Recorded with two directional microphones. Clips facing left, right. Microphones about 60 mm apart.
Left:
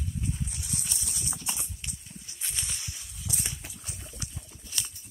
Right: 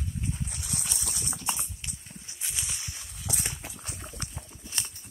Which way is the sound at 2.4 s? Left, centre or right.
Centre.